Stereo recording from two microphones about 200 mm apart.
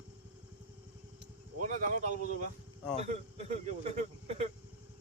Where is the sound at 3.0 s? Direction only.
35° right (ahead or behind).